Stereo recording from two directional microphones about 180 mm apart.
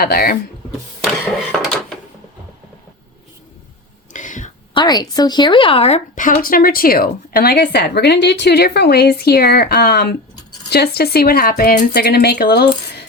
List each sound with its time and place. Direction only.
0.0 s speech: 55° left (ahead or behind)
4.1 s whispering: 45° left (ahead or behind)
4.7 s speech: 25° left (ahead or behind)
6.1 s speech: 45° left (ahead or behind); by 13.1 s 65° left (ahead or behind)